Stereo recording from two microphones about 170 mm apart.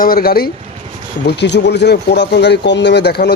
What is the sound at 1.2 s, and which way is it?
Speech, 90° left.